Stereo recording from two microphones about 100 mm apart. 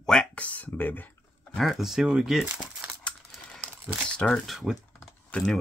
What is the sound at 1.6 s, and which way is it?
Speech, centre (ahead or behind).